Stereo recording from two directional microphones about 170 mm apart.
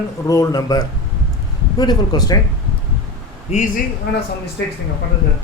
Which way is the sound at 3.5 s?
40° left (ahead or behind).